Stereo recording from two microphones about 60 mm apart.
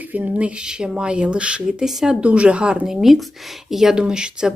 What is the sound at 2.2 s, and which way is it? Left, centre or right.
Speech, right.